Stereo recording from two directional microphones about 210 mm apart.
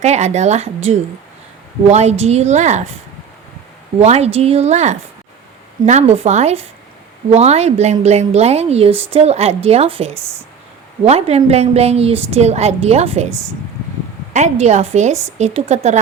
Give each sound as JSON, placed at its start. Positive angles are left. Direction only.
{"t": 0.0, "sound": "a woman's voice", "side_deg": -35}
{"t": 4.0, "sound": "a woman's voice", "side_deg": -30}
{"t": 14.3, "sound": "a woman's voice", "side_deg": -35}